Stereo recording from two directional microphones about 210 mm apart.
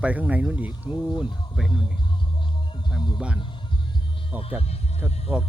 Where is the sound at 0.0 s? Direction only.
5° right (ahead or behind).